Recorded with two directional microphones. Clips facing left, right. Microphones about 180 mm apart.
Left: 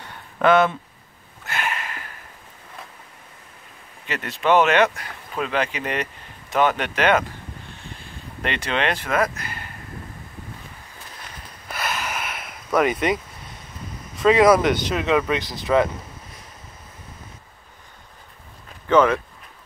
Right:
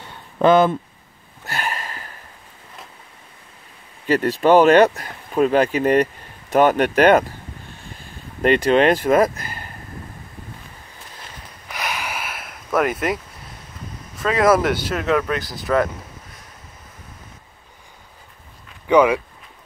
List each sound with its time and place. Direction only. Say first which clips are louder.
1.4 s a sound: right 1 dB; 35° right (ahead or behind)
4.1 s speech: right 6 dB; 35° right (ahead or behind)
8.4 s speech: right 10 dB; 40° right (ahead or behind)
11.7 s a sound: even; 15° right (ahead or behind)
14.1 s speech: left 2 dB; centre (ahead or behind)
18.9 s speech: right 2 dB; 10° right (ahead or behind)